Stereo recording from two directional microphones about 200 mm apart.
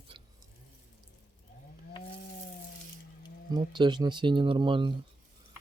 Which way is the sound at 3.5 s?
20° right (ahead or behind).